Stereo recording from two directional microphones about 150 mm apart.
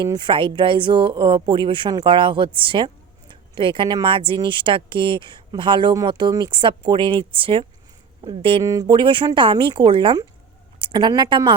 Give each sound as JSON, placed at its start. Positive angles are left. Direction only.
{"t": 0.0, "sound": "speech", "side_deg": -30}
{"t": 8.6, "sound": "speech", "side_deg": -25}